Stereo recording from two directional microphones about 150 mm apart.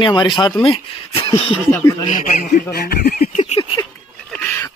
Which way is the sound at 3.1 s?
50° left (ahead or behind).